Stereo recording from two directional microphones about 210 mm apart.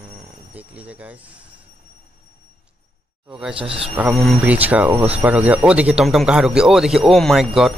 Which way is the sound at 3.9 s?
5° right (ahead or behind).